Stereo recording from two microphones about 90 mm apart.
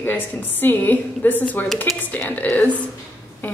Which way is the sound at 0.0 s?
20° left (ahead or behind).